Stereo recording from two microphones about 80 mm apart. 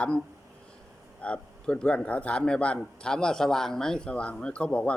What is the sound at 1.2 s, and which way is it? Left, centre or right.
A man's voice, centre.